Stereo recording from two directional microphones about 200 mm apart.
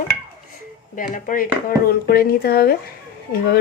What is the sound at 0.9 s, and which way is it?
A woman's voice, 40° left (ahead or behind).